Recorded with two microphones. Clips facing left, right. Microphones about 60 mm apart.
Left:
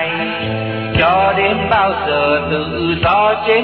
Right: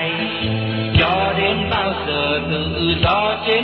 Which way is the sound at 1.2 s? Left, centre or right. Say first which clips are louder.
Left 5 dB; left.